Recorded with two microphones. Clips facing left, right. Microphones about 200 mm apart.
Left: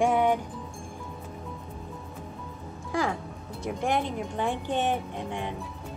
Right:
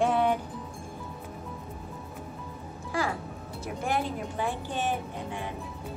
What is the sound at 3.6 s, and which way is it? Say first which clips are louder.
Speech: left 2 dB; 5° right (ahead or behind).